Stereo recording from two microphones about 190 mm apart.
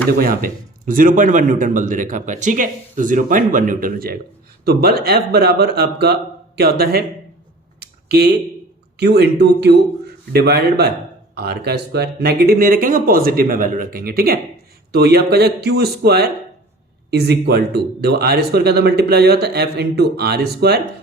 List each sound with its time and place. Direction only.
0.2 s a man's voice: 50° right (ahead or behind)
7.8 s a sound: 60° right (ahead or behind)
9.0 s a man's voice: 60° right (ahead or behind)